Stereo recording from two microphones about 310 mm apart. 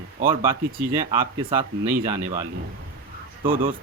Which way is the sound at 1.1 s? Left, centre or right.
Centre.